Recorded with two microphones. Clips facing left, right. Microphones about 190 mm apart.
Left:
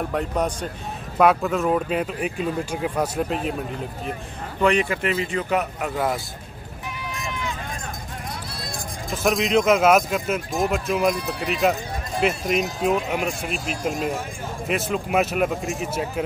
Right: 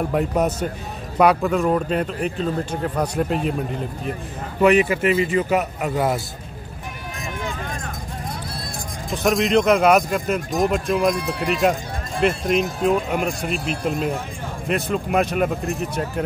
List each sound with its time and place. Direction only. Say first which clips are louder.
0.1 s speech: right 4 dB; 5° right (ahead or behind)
4.6 s speech: right 4 dB; 5° right (ahead or behind)
9.1 s speech: right 2 dB; centre (ahead or behind)
11.1 s speech: right 3 dB; 60° right (ahead or behind)
11.6 s speech: left 1 dB; centre (ahead or behind)